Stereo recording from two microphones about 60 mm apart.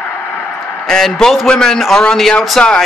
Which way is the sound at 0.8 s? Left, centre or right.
Centre.